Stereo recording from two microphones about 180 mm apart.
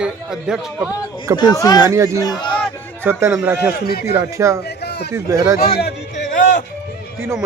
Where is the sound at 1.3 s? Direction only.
20° left (ahead or behind).